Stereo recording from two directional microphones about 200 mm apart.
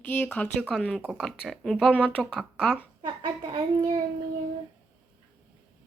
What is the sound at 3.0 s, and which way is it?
Speech, 25° right (ahead or behind).